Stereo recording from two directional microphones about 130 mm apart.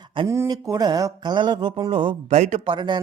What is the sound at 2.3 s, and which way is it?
Speech, 65° right (ahead or behind).